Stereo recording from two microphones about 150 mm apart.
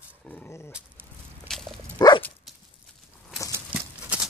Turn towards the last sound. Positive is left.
turn(degrees=-10)  # may be behind; listen again after turning